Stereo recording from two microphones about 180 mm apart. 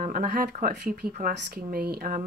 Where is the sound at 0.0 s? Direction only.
55° right (ahead or behind).